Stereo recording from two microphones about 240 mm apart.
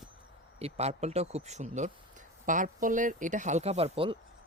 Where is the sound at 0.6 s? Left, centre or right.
Right.